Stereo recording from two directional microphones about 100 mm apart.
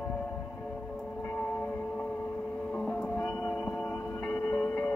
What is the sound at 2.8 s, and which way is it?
Music, 5° left (ahead or behind).